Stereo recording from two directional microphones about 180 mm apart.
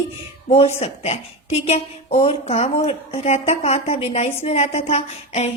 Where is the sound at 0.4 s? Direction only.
35° left (ahead or behind).